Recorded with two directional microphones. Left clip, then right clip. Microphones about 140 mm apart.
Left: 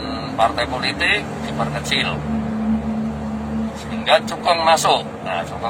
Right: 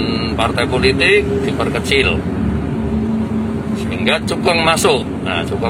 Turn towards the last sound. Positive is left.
turn(degrees=0)  # may be behind; listen again after turning